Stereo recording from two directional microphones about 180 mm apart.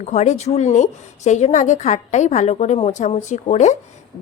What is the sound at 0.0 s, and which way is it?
A woman's voice, 40° left (ahead or behind).